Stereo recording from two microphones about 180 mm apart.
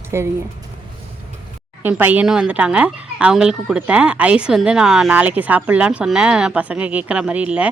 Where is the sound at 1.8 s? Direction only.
10° right (ahead or behind).